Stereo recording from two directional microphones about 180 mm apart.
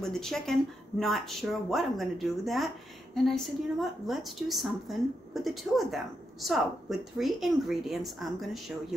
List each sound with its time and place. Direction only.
0.0 s speech: 5° left (ahead or behind)